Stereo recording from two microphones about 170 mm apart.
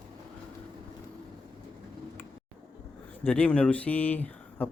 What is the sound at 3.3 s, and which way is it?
Speech, 10° left (ahead or behind).